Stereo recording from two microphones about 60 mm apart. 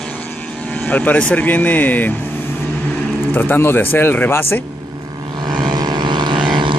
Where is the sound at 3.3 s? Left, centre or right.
Left.